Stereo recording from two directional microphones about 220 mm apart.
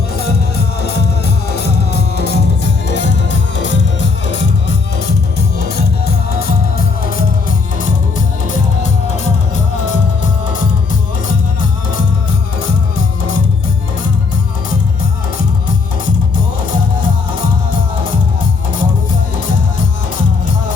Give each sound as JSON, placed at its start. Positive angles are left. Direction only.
{"t": 1.5, "sound": "music", "side_deg": 45}
{"t": 5.5, "sound": "music", "side_deg": 45}